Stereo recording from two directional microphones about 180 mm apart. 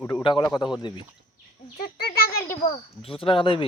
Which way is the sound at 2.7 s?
30° left (ahead or behind).